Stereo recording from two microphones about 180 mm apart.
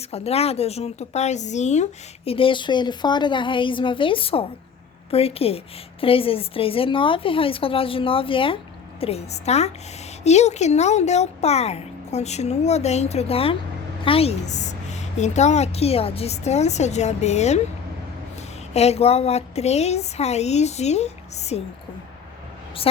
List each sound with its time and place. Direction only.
0.1 s speech: 35° left (ahead or behind)
18.7 s speech: 35° left (ahead or behind)